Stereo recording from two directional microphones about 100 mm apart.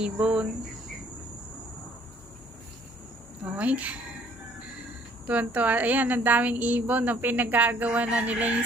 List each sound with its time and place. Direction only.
0.0 s a woman's voice: 10° right (ahead or behind)
3.5 s a woman's voice: 15° right (ahead or behind)